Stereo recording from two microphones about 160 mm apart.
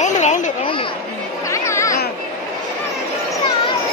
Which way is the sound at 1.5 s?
20° left (ahead or behind).